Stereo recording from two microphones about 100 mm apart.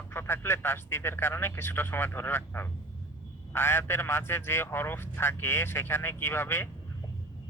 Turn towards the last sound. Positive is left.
turn(degrees=25)  # may be behind; listen again after turning